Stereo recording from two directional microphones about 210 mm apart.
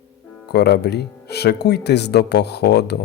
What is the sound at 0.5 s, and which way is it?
Speech, 50° left (ahead or behind).